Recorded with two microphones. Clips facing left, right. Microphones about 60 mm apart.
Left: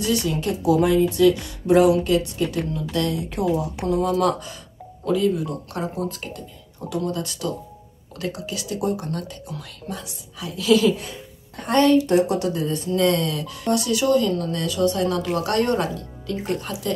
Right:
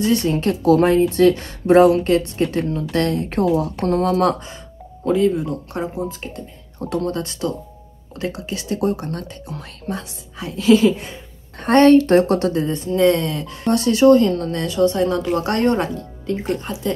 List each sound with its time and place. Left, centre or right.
0.0 s a woman's voice: right
3.8 s speech: right
4.2 s speech: right
6.9 s speech: right
11.6 s a woman's voice: right
12.6 s speech: right